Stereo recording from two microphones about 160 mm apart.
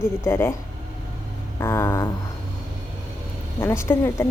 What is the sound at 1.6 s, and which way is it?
Speech, 15° left (ahead or behind).